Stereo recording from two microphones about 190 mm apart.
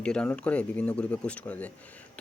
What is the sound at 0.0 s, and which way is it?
Speech, 5° left (ahead or behind).